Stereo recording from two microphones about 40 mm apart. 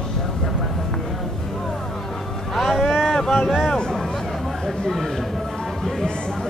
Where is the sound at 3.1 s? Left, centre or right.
Centre.